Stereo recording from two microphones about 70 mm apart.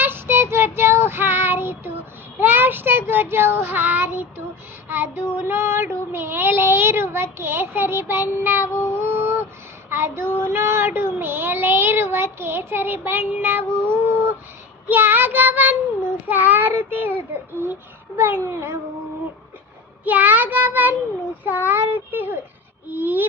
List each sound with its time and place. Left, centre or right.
0.0 s child singing: right
2.4 s a child's voice: right
3.6 s child singing: right
9.0 s a sound: right
9.9 s child singing: right
18.4 s child singing: right
20.1 s child singing: right